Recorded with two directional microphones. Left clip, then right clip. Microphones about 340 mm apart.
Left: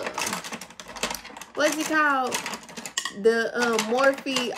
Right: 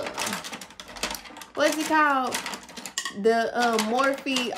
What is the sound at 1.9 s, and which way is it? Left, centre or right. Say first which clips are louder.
Speech: right 1 dB; centre.